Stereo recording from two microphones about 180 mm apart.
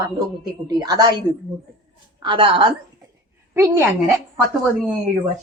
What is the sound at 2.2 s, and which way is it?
Speech, 30° right (ahead or behind).